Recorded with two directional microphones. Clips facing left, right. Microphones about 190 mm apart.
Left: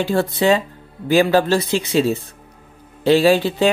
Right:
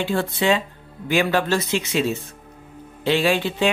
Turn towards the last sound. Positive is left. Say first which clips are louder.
# left 5 dB
turn(degrees=35)  # may be behind; listen again after turning